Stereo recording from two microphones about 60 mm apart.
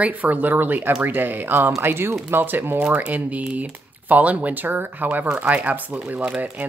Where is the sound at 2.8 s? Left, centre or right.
Right.